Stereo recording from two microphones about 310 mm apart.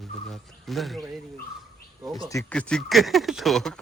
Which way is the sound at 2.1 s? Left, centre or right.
Centre.